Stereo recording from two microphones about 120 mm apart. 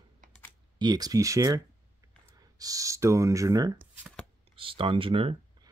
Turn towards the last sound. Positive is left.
turn(degrees=-50)  # may be behind; listen again after turning